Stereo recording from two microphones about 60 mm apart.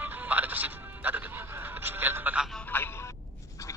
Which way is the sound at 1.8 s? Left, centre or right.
Right.